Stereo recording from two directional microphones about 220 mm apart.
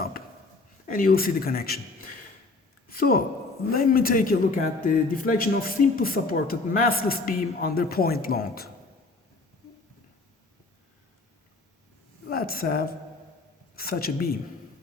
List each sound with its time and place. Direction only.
0.9 s speech: 40° left (ahead or behind)
2.9 s a woman's voice: 40° left (ahead or behind)
12.3 s a woman's voice: 40° left (ahead or behind)